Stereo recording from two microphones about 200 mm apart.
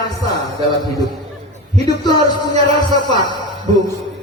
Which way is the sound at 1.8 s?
20° left (ahead or behind).